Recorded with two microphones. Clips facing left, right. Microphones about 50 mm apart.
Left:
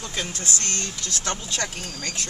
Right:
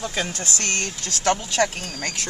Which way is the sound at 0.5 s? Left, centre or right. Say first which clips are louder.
Right 6 dB; right.